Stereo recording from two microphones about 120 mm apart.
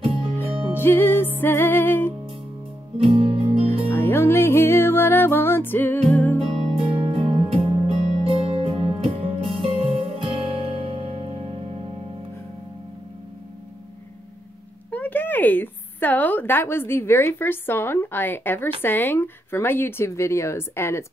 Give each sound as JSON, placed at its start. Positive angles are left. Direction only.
{"t": 0.7, "sound": "music", "side_deg": 20}
{"t": 3.0, "sound": "music", "side_deg": -55}
{"t": 3.9, "sound": "music", "side_deg": 20}
{"t": 6.9, "sound": "music", "side_deg": -45}
{"t": 14.9, "sound": "a woman's voice", "side_deg": 15}